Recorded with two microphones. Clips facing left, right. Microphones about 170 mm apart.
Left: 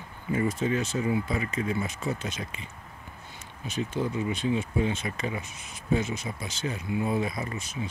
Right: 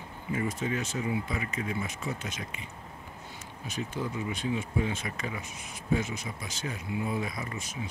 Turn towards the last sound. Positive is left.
turn(degrees=30)  # may be behind; listen again after turning